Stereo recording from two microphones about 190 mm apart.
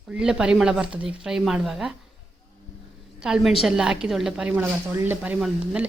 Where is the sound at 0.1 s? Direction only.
5° right (ahead or behind).